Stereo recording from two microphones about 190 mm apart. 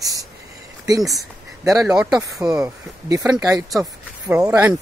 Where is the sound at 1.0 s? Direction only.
Centre (ahead or behind).